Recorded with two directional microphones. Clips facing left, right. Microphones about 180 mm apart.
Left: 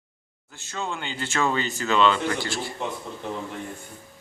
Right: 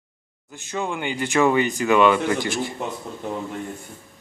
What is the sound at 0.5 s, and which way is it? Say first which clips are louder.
Speech: right 5 dB; 15° right (ahead or behind).